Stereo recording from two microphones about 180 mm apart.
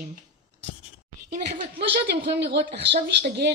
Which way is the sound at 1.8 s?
70° right (ahead or behind).